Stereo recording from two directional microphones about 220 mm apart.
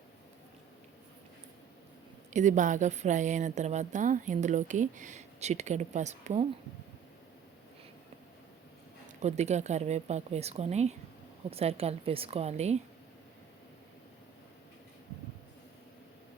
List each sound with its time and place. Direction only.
2.3 s a woman's voice: 35° right (ahead or behind)
9.0 s a woman's voice: 30° right (ahead or behind)